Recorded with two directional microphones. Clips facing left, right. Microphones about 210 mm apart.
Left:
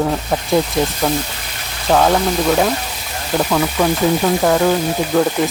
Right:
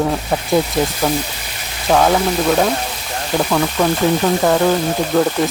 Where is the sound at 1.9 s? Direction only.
Centre (ahead or behind).